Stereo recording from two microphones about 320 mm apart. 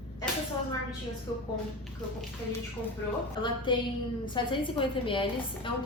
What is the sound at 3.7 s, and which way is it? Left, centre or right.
A woman's voice, centre.